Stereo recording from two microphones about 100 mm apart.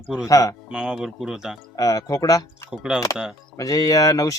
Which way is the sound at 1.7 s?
40° left (ahead or behind).